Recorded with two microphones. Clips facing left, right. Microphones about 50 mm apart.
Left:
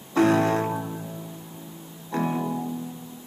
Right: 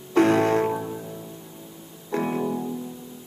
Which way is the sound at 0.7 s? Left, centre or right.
Centre.